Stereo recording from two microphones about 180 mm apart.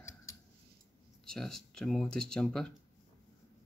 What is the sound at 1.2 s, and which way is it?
Speech, centre (ahead or behind).